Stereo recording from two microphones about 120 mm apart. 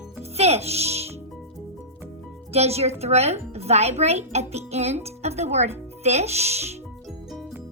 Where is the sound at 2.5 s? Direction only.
60° right (ahead or behind).